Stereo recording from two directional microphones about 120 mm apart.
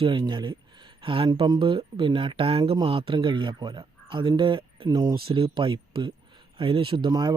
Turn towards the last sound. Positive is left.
turn(degrees=-35)  # may be behind; listen again after turning